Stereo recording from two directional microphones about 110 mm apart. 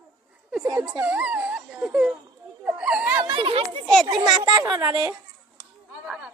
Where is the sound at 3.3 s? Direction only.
50° right (ahead or behind).